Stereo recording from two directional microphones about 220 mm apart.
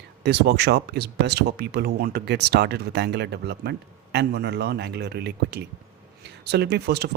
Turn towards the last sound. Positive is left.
turn(degrees=-50)  # may be behind; listen again after turning